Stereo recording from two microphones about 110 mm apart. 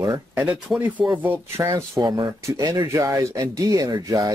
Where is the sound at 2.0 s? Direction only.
40° right (ahead or behind).